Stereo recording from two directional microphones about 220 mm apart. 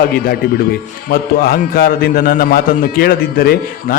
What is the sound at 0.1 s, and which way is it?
A man's voice, 45° left (ahead or behind).